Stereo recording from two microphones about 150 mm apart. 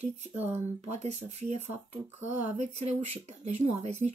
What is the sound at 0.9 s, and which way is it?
Speech, 45° right (ahead or behind).